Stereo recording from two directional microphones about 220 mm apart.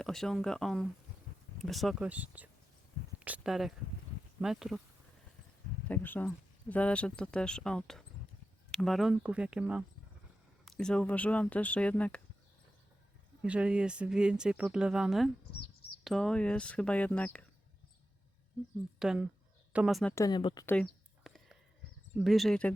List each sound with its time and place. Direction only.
0.0 s speech: centre (ahead or behind)
5.9 s speech: 10° left (ahead or behind)
13.4 s speech: 5° right (ahead or behind)
18.9 s speech: 5° right (ahead or behind)
20.1 s speech: 20° left (ahead or behind)
20.7 s whispering: 5° left (ahead or behind)
22.2 s speech: centre (ahead or behind)